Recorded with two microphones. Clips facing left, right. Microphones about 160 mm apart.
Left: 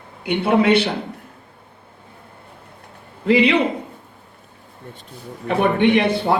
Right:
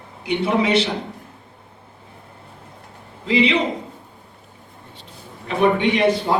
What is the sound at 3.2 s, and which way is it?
Speech, 60° left (ahead or behind).